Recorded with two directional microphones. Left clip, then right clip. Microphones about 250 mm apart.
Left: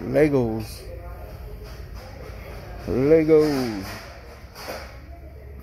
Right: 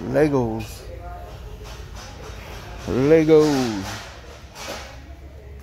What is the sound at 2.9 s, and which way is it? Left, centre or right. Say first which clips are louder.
Speech: right 2 dB; centre.